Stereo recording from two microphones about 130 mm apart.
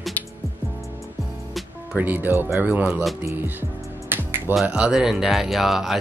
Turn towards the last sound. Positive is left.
turn(degrees=0)  # may be behind; listen again after turning